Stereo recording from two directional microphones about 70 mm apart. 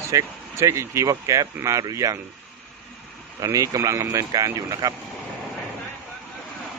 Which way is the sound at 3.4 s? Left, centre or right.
Right.